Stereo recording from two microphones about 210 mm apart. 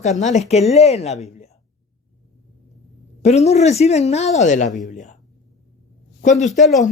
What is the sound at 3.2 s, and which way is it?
Speech, 30° left (ahead or behind).